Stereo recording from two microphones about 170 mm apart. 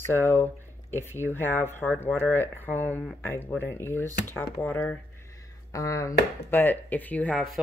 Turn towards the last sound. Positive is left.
turn(degrees=0)  # may be behind; listen again after turning